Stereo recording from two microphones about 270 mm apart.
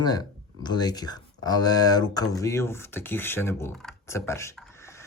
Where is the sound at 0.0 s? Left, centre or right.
Centre.